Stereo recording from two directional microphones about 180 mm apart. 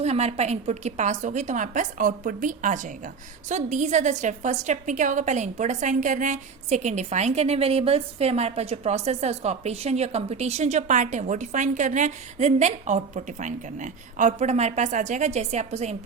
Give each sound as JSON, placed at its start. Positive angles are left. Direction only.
{"t": 0.0, "sound": "a woman's voice", "side_deg": -35}